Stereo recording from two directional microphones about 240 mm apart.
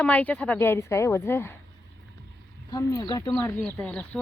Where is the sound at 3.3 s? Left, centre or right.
Centre.